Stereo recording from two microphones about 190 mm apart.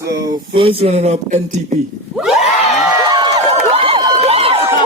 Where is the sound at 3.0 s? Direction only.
20° right (ahead or behind).